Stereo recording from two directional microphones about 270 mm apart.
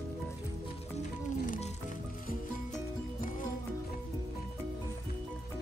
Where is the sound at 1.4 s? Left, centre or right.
Left.